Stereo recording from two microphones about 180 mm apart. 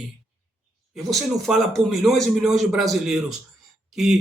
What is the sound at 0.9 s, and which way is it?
A man's voice, centre (ahead or behind).